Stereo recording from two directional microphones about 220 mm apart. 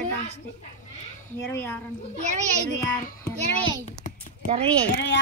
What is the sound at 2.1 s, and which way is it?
Speech, 30° right (ahead or behind).